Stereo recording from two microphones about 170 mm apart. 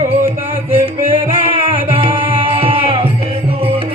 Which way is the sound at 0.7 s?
35° right (ahead or behind).